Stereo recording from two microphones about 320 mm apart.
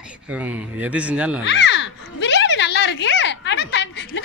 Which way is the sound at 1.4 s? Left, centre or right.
Left.